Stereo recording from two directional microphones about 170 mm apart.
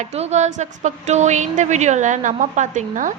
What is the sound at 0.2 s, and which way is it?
A woman's voice, 40° right (ahead or behind).